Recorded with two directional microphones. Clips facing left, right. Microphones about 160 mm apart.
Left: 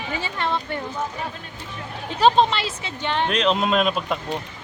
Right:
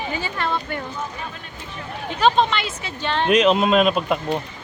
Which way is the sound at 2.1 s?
35° left (ahead or behind).